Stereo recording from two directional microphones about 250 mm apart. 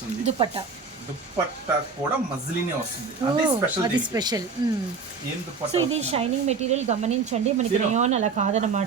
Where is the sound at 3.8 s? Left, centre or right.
Centre.